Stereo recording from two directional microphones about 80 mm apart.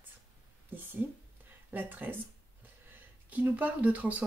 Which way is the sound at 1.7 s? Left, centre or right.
Right.